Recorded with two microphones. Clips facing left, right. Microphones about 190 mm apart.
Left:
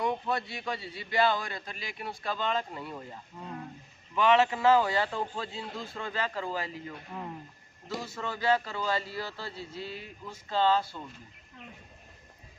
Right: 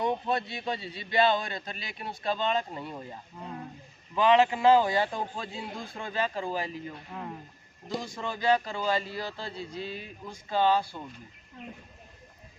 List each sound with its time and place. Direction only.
0.0 s a man's voice: 20° right (ahead or behind)
7.1 s speech: centre (ahead or behind)
7.9 s a man's voice: 15° right (ahead or behind)